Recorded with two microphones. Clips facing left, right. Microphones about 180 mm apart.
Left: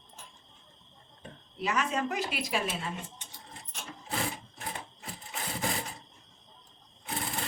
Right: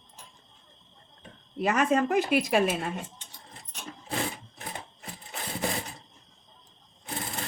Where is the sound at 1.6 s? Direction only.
50° right (ahead or behind).